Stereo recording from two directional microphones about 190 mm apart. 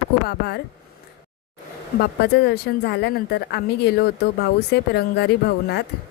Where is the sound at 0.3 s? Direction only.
60° left (ahead or behind).